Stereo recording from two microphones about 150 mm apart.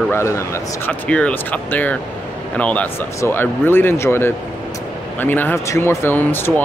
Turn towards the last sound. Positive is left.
turn(degrees=15)  # may be behind; listen again after turning